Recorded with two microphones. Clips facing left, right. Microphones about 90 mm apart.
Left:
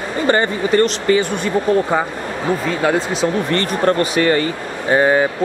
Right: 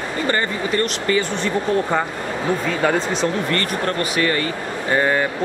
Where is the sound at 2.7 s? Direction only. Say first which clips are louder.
Left 2 dB; 5° left (ahead or behind).